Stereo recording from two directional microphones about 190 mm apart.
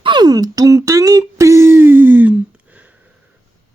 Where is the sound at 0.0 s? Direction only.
25° right (ahead or behind).